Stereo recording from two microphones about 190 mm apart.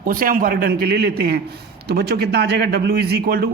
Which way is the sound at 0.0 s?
45° right (ahead or behind).